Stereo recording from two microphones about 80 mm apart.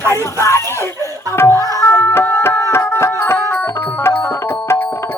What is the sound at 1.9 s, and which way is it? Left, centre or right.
Music, left.